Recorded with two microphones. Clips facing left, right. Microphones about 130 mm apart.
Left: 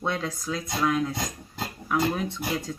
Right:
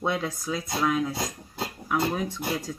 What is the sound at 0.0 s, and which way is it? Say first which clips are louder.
Speech: right 1 dB; 10° right (ahead or behind).